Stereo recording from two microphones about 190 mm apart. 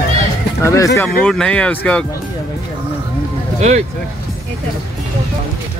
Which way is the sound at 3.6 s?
40° right (ahead or behind).